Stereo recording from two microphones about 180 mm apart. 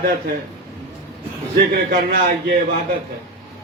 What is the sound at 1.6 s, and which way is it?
A man's voice, 55° right (ahead or behind).